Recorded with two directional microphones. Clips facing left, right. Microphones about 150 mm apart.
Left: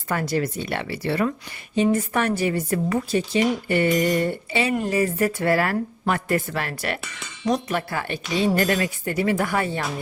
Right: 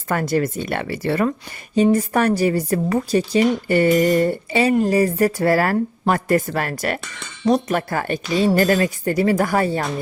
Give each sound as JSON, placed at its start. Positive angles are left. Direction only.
{"t": 0.1, "sound": "speech", "side_deg": -50}